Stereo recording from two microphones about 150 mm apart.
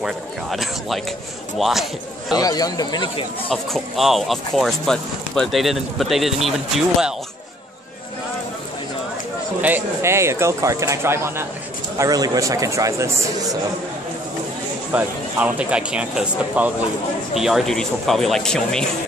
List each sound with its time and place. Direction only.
0.0 s speech: centre (ahead or behind)
2.3 s speech: 25° left (ahead or behind)
3.4 s speech: centre (ahead or behind)
9.6 s a man's voice: 10° right (ahead or behind)
14.9 s speech: 10° right (ahead or behind)